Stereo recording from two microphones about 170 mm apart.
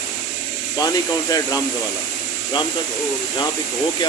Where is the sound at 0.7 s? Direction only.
20° left (ahead or behind).